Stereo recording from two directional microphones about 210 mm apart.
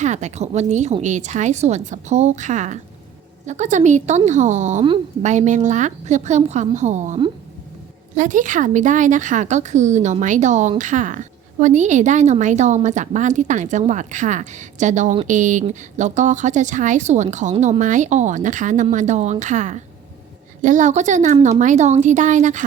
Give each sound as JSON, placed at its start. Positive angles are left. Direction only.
{"t": 0.0, "sound": "speech", "side_deg": -35}